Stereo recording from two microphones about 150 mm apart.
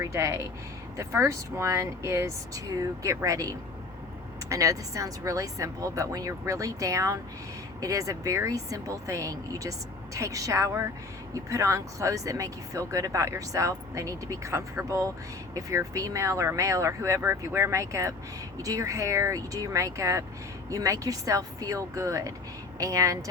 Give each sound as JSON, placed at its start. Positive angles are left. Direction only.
{"t": 0.0, "sound": "speech", "side_deg": -20}